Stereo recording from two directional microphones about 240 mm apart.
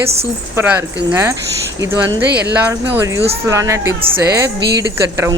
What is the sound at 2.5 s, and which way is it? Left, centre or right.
Speech, centre.